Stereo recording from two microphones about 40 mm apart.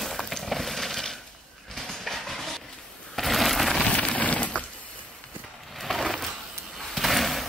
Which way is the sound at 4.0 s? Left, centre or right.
Left.